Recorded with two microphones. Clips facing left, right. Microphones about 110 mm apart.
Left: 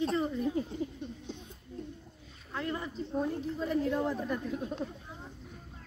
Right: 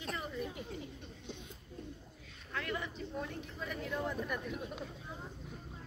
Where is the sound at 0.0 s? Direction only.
30° left (ahead or behind).